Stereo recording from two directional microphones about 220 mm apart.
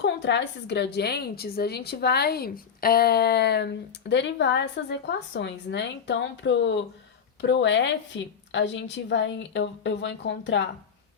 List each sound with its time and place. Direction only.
0.0 s a woman's voice: 50° left (ahead or behind)